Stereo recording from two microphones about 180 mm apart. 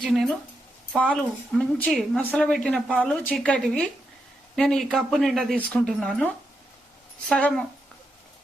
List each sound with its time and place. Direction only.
0.0 s a woman's voice: centre (ahead or behind)